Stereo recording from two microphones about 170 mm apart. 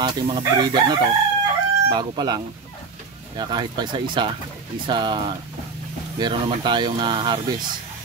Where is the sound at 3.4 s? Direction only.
25° right (ahead or behind).